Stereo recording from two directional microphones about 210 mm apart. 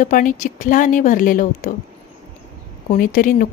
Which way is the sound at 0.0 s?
40° left (ahead or behind).